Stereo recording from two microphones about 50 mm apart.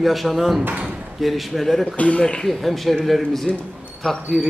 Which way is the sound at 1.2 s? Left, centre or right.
Centre.